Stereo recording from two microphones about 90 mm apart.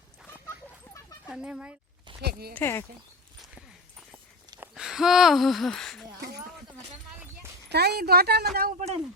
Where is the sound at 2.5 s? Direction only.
25° left (ahead or behind).